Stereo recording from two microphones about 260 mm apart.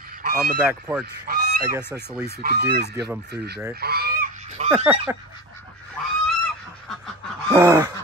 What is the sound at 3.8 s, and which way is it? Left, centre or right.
Goose, right.